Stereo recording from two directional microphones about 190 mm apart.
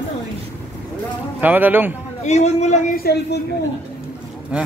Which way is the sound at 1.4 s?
10° right (ahead or behind).